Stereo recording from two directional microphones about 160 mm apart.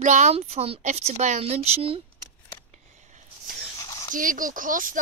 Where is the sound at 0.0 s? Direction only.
50° right (ahead or behind).